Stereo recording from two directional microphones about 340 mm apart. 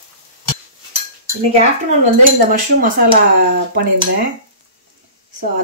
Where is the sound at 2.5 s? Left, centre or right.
Right.